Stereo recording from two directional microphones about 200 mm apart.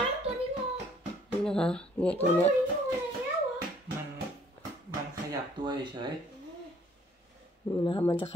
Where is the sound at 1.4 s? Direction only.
5° left (ahead or behind).